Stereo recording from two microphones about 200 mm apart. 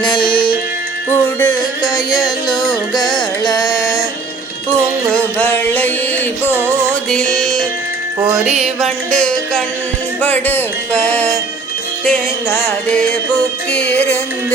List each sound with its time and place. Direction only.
0.0 s music: 25° left (ahead or behind)
1.1 s music: 10° left (ahead or behind)
5.4 s music: 10° left (ahead or behind)
6.5 s music: 10° right (ahead or behind)
7.1 s music: 5° left (ahead or behind)
8.8 s music: 5° left (ahead or behind)
12.5 s music: 10° left (ahead or behind)